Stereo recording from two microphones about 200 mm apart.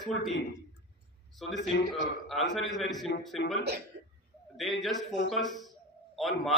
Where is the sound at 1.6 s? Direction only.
65° left (ahead or behind).